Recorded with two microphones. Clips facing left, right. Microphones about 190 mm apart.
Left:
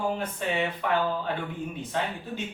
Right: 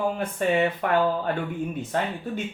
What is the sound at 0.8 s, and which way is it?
Speech, 50° right (ahead or behind).